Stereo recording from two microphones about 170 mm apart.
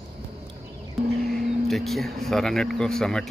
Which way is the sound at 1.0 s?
60° right (ahead or behind).